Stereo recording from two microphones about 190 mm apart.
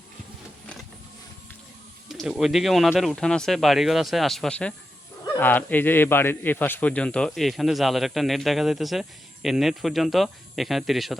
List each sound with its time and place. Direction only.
2.0 s a man's voice: centre (ahead or behind)